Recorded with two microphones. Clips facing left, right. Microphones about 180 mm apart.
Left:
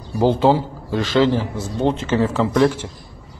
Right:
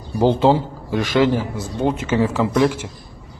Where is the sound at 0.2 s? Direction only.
20° right (ahead or behind).